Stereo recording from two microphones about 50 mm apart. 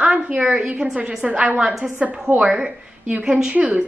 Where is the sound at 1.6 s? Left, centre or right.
Centre.